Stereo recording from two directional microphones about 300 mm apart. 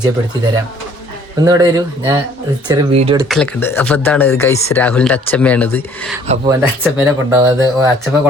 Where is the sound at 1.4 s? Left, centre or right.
Centre.